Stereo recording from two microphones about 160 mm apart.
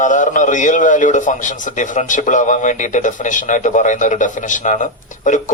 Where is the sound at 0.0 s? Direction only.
50° left (ahead or behind).